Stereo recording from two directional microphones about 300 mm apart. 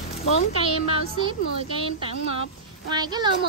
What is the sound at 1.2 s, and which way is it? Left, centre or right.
Speech, centre.